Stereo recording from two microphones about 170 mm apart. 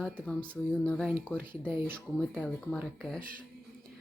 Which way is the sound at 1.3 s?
10° right (ahead or behind).